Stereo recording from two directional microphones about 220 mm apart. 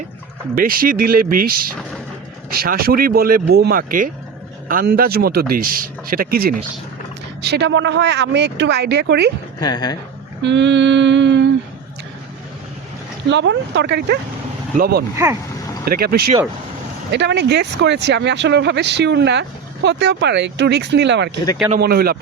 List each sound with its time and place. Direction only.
0.5 s speech: 40° right (ahead or behind)
9.6 s speech: 20° left (ahead or behind)
10.4 s speech: 55° right (ahead or behind)
13.2 s speech: 55° right (ahead or behind)
15.1 s speech: 10° right (ahead or behind)
15.9 s speech: 45° right (ahead or behind)